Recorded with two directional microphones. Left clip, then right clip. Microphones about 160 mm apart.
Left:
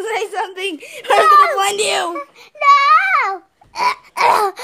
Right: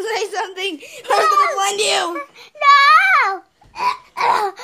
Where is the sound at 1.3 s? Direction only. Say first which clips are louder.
Left 5 dB; 80° left.